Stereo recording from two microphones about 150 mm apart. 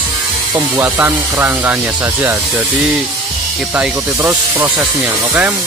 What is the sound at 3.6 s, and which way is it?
Speech, 5° right (ahead or behind).